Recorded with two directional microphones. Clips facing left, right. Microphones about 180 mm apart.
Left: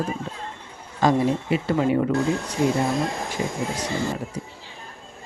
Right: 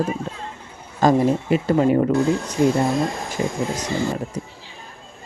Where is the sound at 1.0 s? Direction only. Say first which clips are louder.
Right 3 dB; 45° right (ahead or behind).